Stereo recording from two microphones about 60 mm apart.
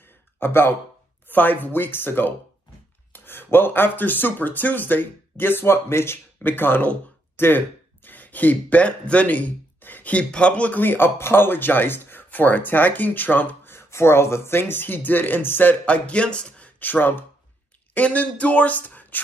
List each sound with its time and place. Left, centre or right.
0.4 s speech: left
13.7 s speech: left
15.8 s speech: left